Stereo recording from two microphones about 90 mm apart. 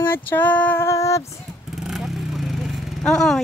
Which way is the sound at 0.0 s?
25° left (ahead or behind).